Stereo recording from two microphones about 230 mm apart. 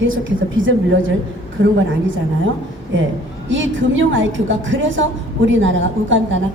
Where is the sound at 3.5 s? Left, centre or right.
Right.